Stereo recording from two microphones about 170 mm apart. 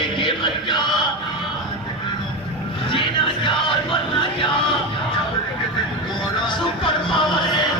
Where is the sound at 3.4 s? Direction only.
30° left (ahead or behind).